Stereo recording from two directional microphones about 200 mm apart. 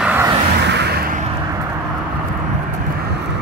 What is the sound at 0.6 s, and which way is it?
Music, 55° right (ahead or behind).